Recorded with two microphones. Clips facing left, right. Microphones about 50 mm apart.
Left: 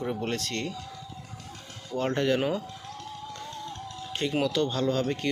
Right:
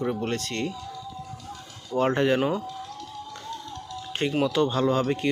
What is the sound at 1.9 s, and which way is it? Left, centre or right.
Speech, centre.